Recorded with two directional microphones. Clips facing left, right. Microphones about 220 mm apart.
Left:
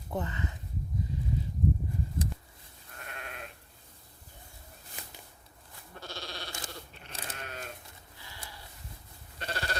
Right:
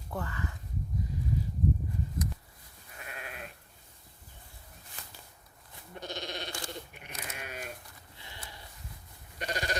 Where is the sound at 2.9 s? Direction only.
5° right (ahead or behind).